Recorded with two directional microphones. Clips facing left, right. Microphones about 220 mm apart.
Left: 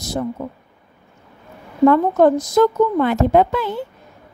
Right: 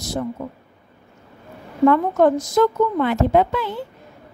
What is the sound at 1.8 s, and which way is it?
Speech, 35° left (ahead or behind).